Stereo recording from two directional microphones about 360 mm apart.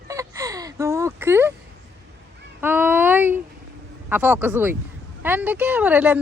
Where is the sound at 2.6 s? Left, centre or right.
Centre.